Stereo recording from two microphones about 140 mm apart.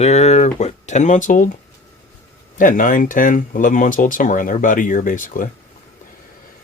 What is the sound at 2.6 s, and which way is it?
Speech, 70° left (ahead or behind).